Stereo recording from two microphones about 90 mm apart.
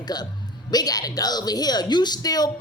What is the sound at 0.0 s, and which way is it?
A man's voice, 50° left (ahead or behind).